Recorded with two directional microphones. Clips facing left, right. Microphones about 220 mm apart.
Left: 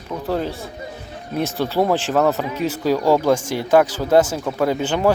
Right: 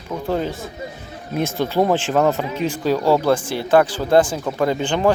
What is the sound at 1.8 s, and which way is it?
Speech, centre (ahead or behind).